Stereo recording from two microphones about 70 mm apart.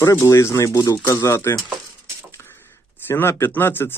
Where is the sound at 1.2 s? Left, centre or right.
Left.